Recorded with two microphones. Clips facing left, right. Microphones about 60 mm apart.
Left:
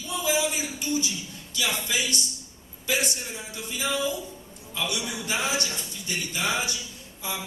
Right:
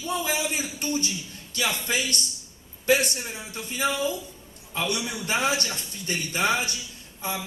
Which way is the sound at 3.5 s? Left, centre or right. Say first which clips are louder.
Right 2 dB; right.